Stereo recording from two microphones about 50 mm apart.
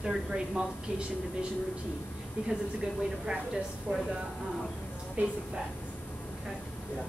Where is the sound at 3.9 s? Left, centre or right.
Right.